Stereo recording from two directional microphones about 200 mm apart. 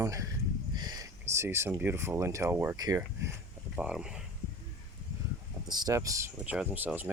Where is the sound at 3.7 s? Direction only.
5° right (ahead or behind).